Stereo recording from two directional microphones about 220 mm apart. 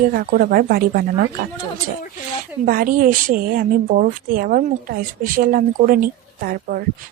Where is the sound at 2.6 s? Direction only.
40° right (ahead or behind).